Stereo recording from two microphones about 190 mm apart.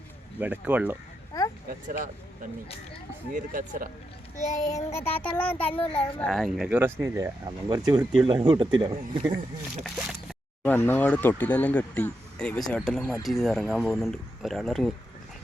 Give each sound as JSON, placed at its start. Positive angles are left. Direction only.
{"t": 0.3, "sound": "speech", "side_deg": -10}
{"t": 1.3, "sound": "a sound", "side_deg": 20}
{"t": 3.3, "sound": "speech", "side_deg": -45}
{"t": 4.4, "sound": "child singing", "side_deg": 40}
{"t": 4.7, "sound": "speech", "side_deg": 15}
{"t": 9.8, "sound": "speech", "side_deg": 0}
{"t": 10.6, "sound": "speech", "side_deg": 10}